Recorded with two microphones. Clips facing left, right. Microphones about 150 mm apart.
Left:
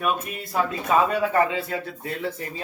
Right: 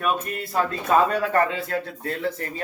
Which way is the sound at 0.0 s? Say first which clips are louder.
Right 1 dB; 5° left (ahead or behind).